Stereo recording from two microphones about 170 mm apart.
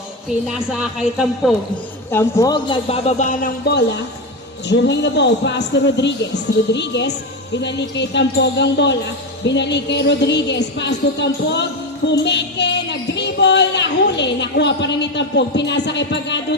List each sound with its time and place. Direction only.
0.7 s a man's voice: 5° right (ahead or behind)
2.0 s a man's voice: 15° left (ahead or behind); by 3.5 s 45° left (ahead or behind)
3.7 s a woman's voice: 90° left
12.0 s child singing: 90° left